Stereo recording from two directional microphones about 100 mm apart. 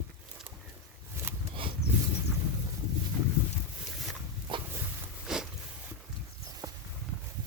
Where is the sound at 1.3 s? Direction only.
25° right (ahead or behind).